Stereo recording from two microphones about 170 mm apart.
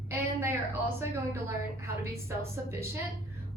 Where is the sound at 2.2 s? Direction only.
15° right (ahead or behind).